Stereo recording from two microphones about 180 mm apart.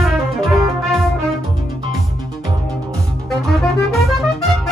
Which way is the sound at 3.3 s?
Centre (ahead or behind).